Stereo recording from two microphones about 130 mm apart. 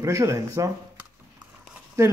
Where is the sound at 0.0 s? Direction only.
25° right (ahead or behind).